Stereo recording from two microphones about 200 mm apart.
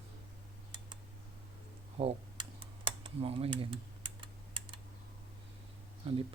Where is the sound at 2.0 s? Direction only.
25° right (ahead or behind).